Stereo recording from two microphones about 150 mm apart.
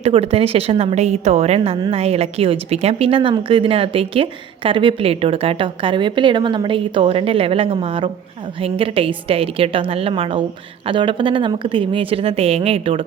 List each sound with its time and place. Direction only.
0.0 s a woman's voice: 40° right (ahead or behind)